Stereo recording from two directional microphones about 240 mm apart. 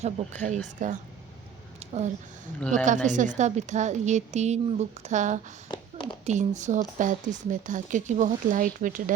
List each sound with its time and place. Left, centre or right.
0.0 s a woman's voice: right
1.8 s a sound: right
2.6 s a woman's voice: centre
2.8 s a woman's voice: right
5.7 s a sound: centre
6.2 s speech: right